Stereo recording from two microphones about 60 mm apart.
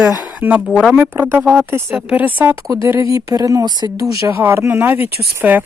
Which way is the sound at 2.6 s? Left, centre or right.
Right.